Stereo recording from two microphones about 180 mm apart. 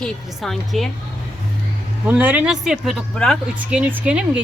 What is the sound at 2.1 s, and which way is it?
Speech, 10° right (ahead or behind).